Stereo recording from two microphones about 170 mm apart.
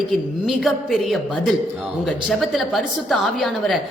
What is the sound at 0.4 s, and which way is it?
A man's voice, centre (ahead or behind).